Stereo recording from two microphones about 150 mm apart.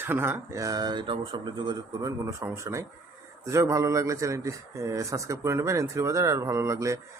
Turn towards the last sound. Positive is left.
turn(degrees=-20)  # may be behind; listen again after turning